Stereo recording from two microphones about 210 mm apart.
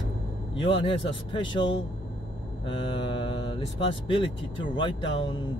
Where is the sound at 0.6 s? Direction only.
25° left (ahead or behind).